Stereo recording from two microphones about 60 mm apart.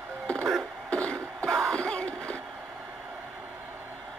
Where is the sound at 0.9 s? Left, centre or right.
Centre.